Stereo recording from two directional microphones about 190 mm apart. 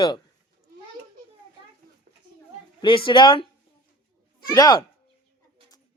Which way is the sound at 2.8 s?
25° left (ahead or behind).